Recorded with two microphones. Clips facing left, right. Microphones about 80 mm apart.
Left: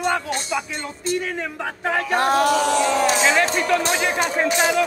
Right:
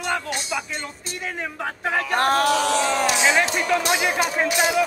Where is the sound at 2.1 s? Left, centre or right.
Right.